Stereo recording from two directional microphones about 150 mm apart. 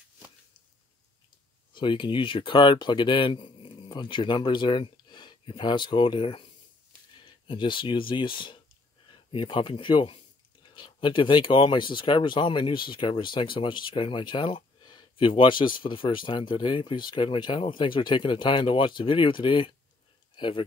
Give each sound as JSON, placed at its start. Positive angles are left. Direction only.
{"t": 1.7, "sound": "speech", "side_deg": 35}